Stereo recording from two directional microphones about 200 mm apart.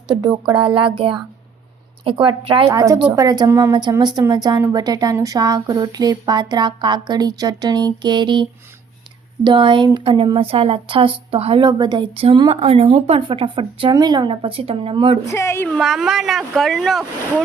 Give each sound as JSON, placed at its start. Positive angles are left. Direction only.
{"t": 0.2, "sound": "a woman's voice", "side_deg": -20}
{"t": 2.6, "sound": "a woman's voice", "side_deg": -15}
{"t": 15.3, "sound": "a woman's voice", "side_deg": 15}
{"t": 15.8, "sound": "speech", "side_deg": 0}